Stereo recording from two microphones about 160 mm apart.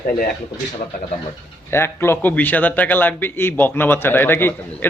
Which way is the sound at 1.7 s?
15° left (ahead or behind).